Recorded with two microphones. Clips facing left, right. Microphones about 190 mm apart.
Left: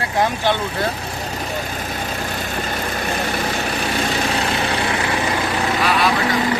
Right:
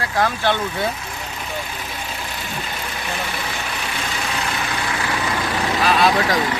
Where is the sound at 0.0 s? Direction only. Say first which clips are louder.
Left 1 dB; 20° left (ahead or behind).